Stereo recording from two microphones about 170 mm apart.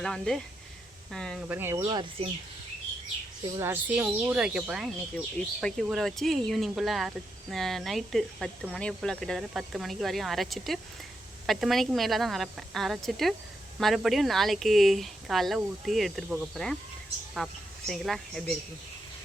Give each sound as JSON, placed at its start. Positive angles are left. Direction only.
{"t": 0.0, "sound": "speech", "side_deg": 5}
{"t": 1.5, "sound": "speech", "side_deg": -15}
{"t": 3.6, "sound": "speech", "side_deg": -10}